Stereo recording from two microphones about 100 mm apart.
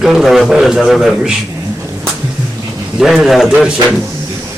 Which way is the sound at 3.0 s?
5° right (ahead or behind).